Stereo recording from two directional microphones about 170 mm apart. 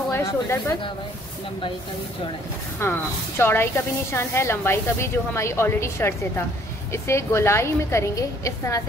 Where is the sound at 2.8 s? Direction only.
15° left (ahead or behind).